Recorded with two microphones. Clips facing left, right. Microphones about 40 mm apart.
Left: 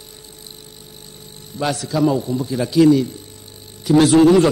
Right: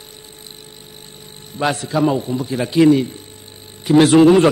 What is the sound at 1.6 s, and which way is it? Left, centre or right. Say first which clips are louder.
A man's voice: right 1 dB; right.